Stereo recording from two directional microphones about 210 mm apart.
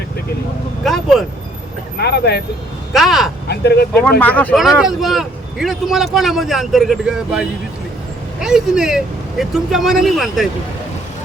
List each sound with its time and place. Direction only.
0.9 s speech: centre (ahead or behind)
2.0 s speech: 50° left (ahead or behind)
2.9 s speech: centre (ahead or behind)
3.5 s speech: 50° left (ahead or behind)
4.2 s speech: 5° left (ahead or behind)